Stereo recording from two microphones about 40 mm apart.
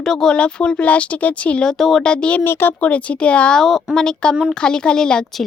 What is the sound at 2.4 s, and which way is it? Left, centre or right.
Speech, left.